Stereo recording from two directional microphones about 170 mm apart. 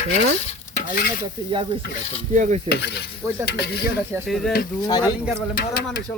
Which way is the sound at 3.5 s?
70° left (ahead or behind).